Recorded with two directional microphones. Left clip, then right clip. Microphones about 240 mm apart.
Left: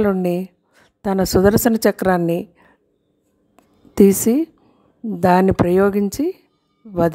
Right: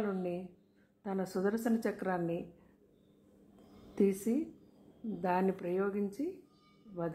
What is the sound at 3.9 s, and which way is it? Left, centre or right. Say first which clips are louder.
A woman's voice: left 18 dB; left.